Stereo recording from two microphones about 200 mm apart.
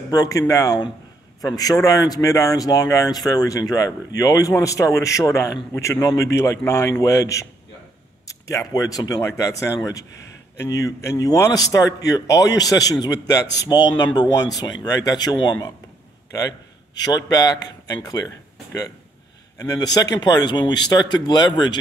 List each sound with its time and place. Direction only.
0.1 s a man's voice: 15° left (ahead or behind)
19.6 s speech: 20° left (ahead or behind)